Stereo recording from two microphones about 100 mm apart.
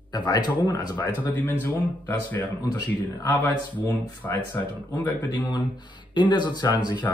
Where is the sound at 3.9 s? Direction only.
40° left (ahead or behind).